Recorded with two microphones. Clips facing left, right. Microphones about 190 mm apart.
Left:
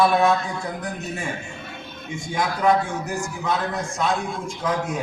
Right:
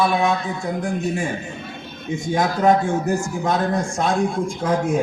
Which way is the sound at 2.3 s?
45° right (ahead or behind).